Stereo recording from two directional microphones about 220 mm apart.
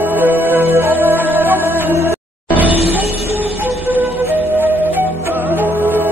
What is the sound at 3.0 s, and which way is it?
Music, 30° left (ahead or behind).